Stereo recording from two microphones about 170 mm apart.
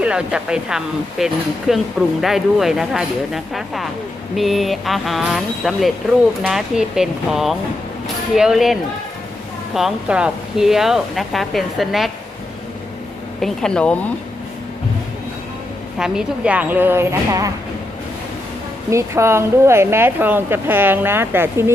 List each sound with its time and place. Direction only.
0.0 s speech: 5° right (ahead or behind)
13.4 s speech: 5° left (ahead or behind)
16.0 s a woman's voice: 5° right (ahead or behind)
18.9 s a woman's voice: 15° right (ahead or behind)